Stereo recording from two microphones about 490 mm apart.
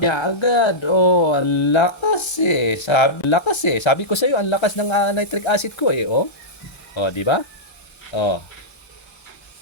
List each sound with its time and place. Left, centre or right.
0.0 s speech: left